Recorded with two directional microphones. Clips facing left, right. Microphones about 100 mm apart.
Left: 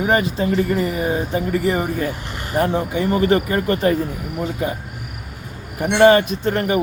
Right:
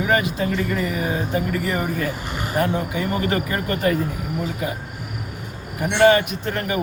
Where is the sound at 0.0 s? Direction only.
35° left (ahead or behind).